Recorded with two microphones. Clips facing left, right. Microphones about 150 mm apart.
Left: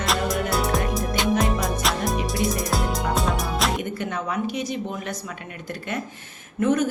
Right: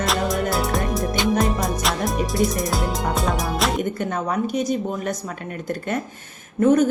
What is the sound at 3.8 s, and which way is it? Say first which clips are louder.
Speech: right 4 dB; 45° right (ahead or behind).